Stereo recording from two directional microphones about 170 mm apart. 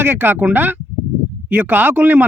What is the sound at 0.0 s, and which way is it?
Speech, 10° right (ahead or behind).